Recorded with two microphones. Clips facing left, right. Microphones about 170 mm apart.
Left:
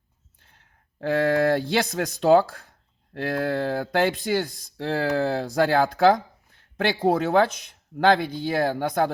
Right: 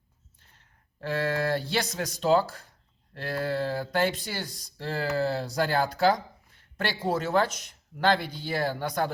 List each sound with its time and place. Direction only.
1.0 s speech: 60° left (ahead or behind)